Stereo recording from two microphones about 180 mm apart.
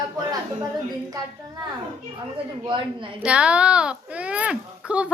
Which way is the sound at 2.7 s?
25° right (ahead or behind).